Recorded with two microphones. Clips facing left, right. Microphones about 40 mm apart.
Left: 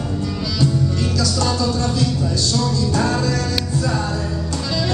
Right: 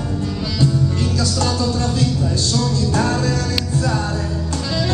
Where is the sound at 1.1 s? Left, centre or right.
Centre.